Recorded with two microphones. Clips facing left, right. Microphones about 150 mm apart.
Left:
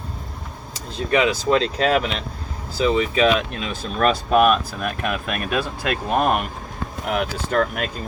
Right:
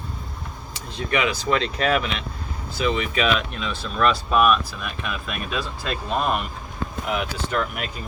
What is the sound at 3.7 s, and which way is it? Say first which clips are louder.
Speech: left 1 dB; 45° left (ahead or behind).